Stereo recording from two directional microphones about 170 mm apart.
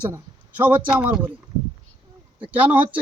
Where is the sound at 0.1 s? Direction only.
10° right (ahead or behind).